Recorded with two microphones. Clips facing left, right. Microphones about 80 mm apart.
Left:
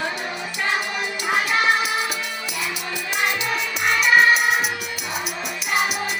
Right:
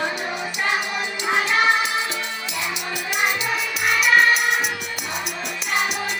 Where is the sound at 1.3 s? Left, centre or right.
Right.